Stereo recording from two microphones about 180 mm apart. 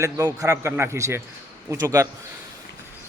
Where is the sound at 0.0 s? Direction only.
20° right (ahead or behind).